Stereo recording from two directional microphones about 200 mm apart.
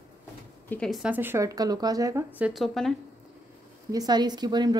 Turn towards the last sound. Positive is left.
turn(degrees=-20)  # may be behind; listen again after turning